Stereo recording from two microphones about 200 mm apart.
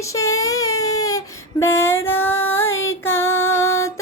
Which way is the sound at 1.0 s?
15° left (ahead or behind).